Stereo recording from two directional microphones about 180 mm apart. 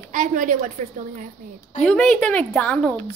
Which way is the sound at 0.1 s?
45° right (ahead or behind).